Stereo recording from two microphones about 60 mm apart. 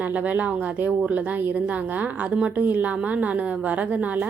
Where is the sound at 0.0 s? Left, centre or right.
Right.